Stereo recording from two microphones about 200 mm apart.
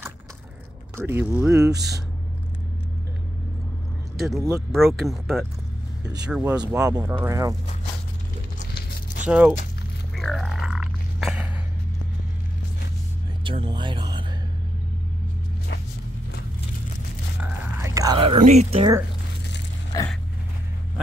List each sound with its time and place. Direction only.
0.9 s speech: 10° right (ahead or behind)
4.4 s speech: 15° right (ahead or behind)
4.7 s speech: centre (ahead or behind)
6.6 s speech: 15° right (ahead or behind)
8.5 s a sound: 45° left (ahead or behind)
9.3 s speech: 5° right (ahead or behind)
10.1 s a sound: centre (ahead or behind)
13.4 s speech: 25° right (ahead or behind)
17.4 s whispering: 10° right (ahead or behind)
18.4 s speech: 35° right (ahead or behind)
19.9 s a sound: 15° left (ahead or behind)